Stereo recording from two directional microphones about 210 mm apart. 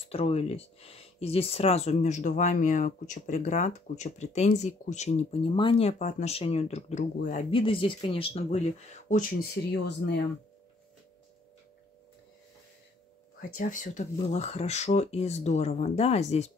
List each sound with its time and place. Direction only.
0.1 s speech: 30° left (ahead or behind)
7.5 s speech: 25° left (ahead or behind)
9.1 s speech: 45° left (ahead or behind)
13.6 s speech: 40° left (ahead or behind)